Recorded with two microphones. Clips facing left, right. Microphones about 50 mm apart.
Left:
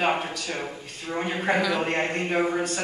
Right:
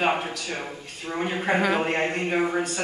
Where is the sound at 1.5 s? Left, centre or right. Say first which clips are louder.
Right 2 dB; right.